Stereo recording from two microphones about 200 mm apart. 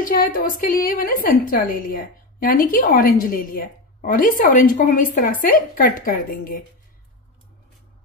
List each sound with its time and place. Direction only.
0.0 s a woman's voice: 45° left (ahead or behind)